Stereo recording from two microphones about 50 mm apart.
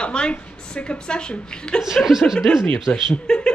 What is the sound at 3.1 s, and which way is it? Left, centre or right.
Speech, centre.